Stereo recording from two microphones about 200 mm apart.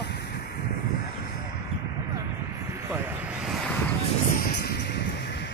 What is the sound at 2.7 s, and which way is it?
Vehicle, 10° right (ahead or behind).